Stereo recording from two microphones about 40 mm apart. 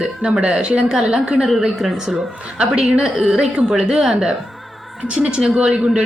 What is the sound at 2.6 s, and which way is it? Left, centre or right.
Speech, right.